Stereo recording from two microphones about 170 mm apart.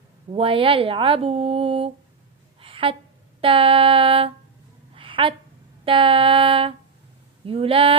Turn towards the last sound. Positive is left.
turn(degrees=-35)  # may be behind; listen again after turning